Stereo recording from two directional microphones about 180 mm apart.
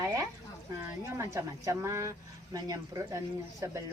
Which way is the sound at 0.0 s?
15° right (ahead or behind).